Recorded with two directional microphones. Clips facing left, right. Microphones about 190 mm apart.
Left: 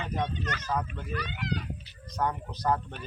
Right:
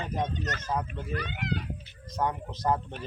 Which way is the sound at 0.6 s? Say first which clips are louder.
Left 1 dB; 25° right (ahead or behind).